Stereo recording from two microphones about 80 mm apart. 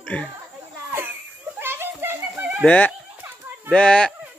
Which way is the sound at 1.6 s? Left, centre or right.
Right.